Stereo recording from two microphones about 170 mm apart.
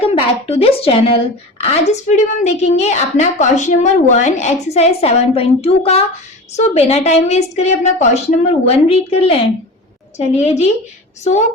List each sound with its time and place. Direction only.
0.0 s a woman's voice: 35° left (ahead or behind)